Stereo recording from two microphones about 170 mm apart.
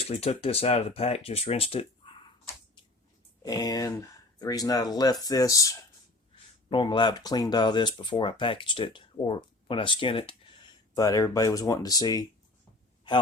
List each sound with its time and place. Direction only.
0.0 s speech: 35° left (ahead or behind)
3.4 s speech: 20° left (ahead or behind)